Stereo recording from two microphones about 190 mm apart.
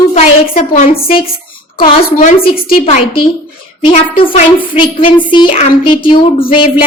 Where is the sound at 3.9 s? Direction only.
40° left (ahead or behind).